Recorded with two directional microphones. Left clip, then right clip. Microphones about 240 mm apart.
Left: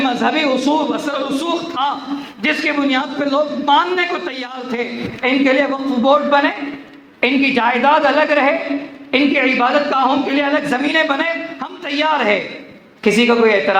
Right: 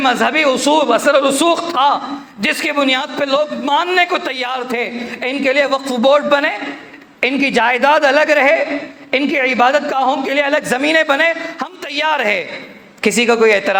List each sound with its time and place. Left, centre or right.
0.0 s a man's voice: right